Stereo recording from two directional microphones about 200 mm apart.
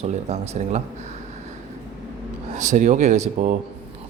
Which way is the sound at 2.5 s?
35° right (ahead or behind).